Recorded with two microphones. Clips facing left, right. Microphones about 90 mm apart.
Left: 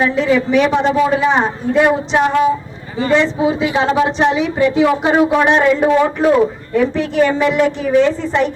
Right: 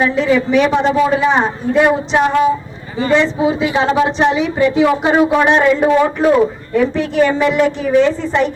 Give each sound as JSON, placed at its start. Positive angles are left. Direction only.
{"t": 0.0, "sound": "a woman's voice", "side_deg": -25}